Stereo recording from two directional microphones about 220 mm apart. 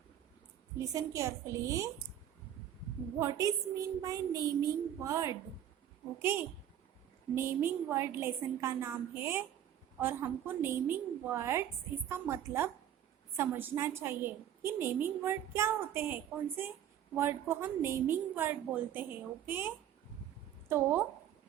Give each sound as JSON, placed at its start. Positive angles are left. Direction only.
{"t": 0.8, "sound": "a woman's voice", "side_deg": -15}
{"t": 3.2, "sound": "a woman's voice", "side_deg": -15}